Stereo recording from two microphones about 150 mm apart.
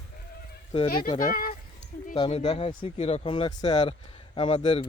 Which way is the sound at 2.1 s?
40° left (ahead or behind).